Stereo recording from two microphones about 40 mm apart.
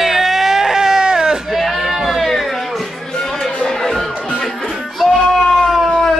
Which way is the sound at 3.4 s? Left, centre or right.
Centre.